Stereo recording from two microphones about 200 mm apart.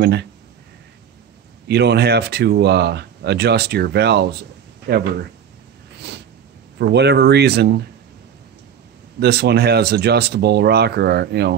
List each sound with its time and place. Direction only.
0.0 s speech: 55° right (ahead or behind)
1.7 s speech: 55° right (ahead or behind)
6.8 s speech: 60° right (ahead or behind)
9.2 s speech: 55° right (ahead or behind)